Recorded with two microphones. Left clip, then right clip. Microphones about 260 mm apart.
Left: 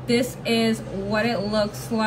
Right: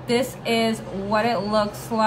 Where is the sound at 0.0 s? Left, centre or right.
Centre.